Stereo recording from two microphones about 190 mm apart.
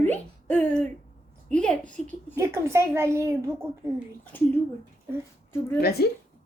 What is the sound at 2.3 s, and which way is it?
A child's voice, 15° right (ahead or behind).